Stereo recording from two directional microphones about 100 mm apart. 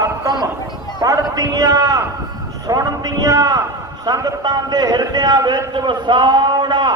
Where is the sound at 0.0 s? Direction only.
40° right (ahead or behind).